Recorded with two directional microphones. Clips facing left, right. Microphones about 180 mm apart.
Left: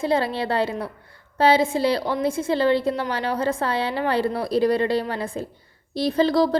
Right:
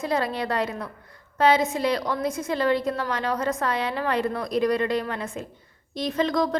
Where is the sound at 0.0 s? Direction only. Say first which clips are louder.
Left 3 dB; 30° left (ahead or behind).